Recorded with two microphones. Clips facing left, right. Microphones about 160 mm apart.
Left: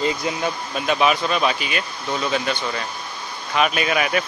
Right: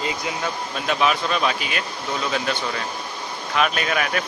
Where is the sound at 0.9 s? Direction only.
5° left (ahead or behind).